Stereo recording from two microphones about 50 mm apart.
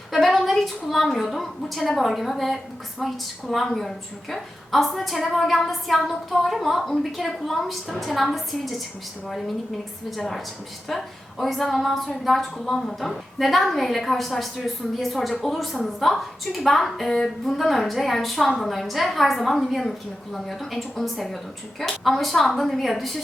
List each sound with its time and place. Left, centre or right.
0.1 s a sound: centre
0.5 s a woman's voice: centre
10.2 s a woman's voice: centre